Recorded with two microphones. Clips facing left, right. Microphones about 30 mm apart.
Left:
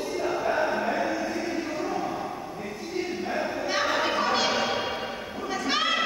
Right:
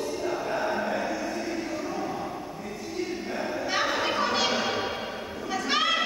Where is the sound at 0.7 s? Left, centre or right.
Centre.